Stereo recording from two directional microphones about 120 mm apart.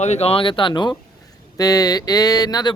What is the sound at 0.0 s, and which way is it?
Speech, 65° left (ahead or behind).